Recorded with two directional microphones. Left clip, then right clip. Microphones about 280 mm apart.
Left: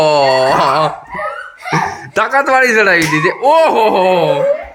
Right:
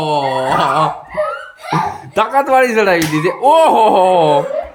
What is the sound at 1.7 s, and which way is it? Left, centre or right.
Speech, centre.